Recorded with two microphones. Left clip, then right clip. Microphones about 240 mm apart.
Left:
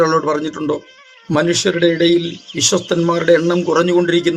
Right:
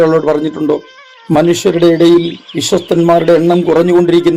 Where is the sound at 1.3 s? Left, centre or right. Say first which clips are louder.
Right 5 dB; centre.